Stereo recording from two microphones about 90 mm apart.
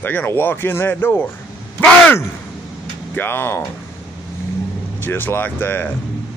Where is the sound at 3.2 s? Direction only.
25° left (ahead or behind).